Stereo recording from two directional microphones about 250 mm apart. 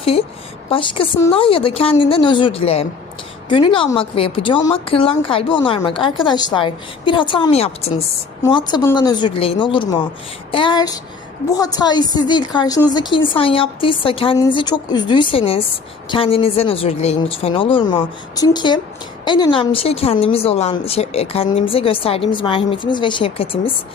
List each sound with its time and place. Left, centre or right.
0.0 s a woman's voice: left